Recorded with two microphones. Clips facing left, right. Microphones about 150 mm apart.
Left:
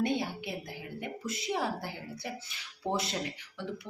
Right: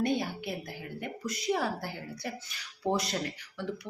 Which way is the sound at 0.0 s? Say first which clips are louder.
Right 1 dB; 25° left (ahead or behind).